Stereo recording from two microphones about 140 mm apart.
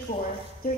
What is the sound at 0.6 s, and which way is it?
Music, 90° left.